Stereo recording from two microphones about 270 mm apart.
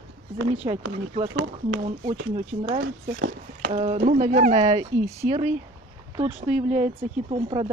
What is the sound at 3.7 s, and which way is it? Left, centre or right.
Speech, right.